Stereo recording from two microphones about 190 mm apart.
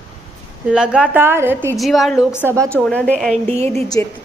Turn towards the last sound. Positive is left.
turn(degrees=-35)  # may be behind; listen again after turning